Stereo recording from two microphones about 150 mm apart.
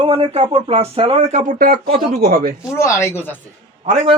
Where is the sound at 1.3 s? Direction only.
60° right (ahead or behind).